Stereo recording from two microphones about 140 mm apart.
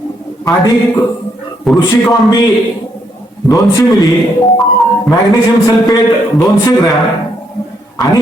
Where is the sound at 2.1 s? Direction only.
30° left (ahead or behind).